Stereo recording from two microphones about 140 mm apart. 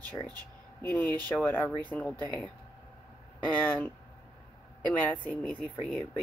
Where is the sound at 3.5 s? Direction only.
10° left (ahead or behind).